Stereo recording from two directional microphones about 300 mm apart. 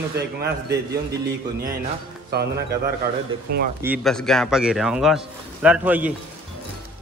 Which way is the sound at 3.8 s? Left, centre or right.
Centre.